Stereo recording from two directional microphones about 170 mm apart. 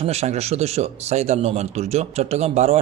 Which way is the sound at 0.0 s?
40° right (ahead or behind).